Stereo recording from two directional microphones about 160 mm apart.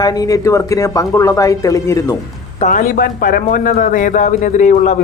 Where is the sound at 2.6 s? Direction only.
55° left (ahead or behind).